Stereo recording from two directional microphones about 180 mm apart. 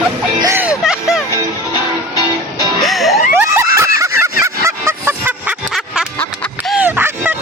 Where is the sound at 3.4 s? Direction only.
15° right (ahead or behind).